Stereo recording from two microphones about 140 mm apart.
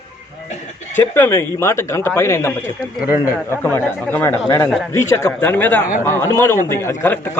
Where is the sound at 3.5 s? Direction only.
15° left (ahead or behind).